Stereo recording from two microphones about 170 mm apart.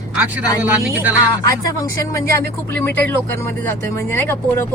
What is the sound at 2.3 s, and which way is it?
Speech, 10° left (ahead or behind).